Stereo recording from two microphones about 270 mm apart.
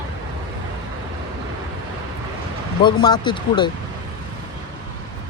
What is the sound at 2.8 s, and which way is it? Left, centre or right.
Speech, centre.